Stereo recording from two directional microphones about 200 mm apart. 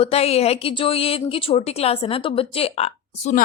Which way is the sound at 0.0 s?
30° left (ahead or behind).